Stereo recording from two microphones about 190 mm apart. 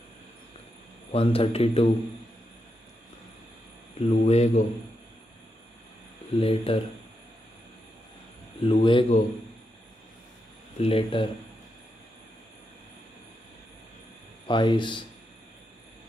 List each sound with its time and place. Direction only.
1.1 s a man's voice: 30° left (ahead or behind)
4.1 s a man's voice: 35° left (ahead or behind)
6.4 s a man's voice: 30° left (ahead or behind)
8.5 s speech: 35° left (ahead or behind)
8.8 s speech: 25° left (ahead or behind)
10.8 s speech: 30° left (ahead or behind)
14.5 s speech: 25° left (ahead or behind)